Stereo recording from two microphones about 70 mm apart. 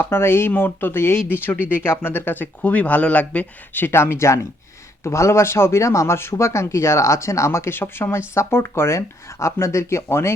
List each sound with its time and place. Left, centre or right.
0.0 s speech: left